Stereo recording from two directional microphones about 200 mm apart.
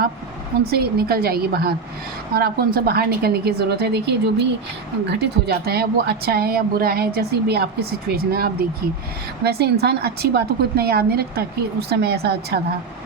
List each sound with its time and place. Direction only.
0.6 s a woman's voice: 50° right (ahead or behind)